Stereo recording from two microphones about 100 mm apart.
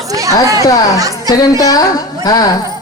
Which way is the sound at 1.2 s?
40° left (ahead or behind).